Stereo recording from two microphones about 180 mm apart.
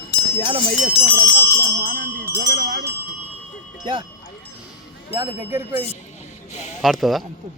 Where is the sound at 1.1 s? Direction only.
15° right (ahead or behind).